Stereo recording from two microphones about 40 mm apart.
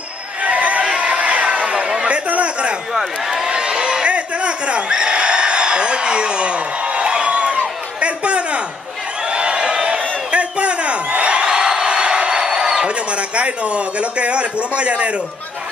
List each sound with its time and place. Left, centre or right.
0.4 s a sound: right
2.2 s chatter: right
2.9 s speech: centre
3.4 s a sound: right
11.4 s crowd: centre
12.8 s a man's voice: right